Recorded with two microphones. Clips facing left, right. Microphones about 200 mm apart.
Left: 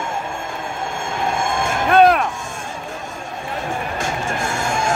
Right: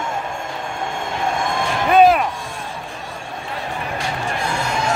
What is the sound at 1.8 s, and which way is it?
Music, centre (ahead or behind).